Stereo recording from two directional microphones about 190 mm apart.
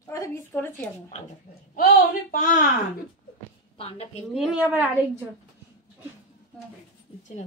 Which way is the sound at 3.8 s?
30° left (ahead or behind).